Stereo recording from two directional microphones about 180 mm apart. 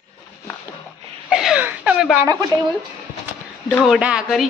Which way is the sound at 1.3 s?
5° right (ahead or behind).